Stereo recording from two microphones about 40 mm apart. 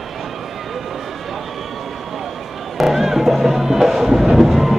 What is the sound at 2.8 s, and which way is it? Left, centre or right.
Music, centre.